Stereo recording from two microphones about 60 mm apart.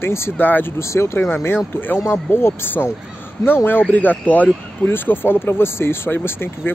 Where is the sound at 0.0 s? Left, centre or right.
Left.